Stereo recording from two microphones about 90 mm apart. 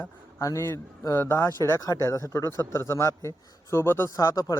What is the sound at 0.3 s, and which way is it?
Speech, 30° left (ahead or behind).